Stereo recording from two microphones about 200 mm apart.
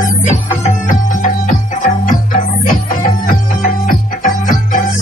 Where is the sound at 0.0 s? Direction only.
35° left (ahead or behind).